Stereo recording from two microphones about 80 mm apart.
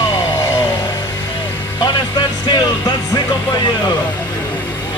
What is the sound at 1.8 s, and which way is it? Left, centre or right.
Music, left.